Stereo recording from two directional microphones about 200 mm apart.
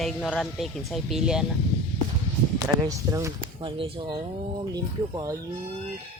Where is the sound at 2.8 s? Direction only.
15° right (ahead or behind).